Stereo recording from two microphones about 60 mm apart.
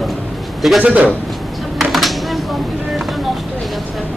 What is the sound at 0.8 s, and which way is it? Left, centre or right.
Speech, right.